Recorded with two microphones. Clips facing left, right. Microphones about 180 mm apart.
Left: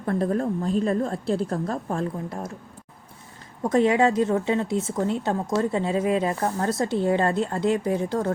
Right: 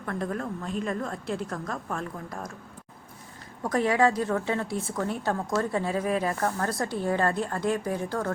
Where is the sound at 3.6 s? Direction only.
20° left (ahead or behind).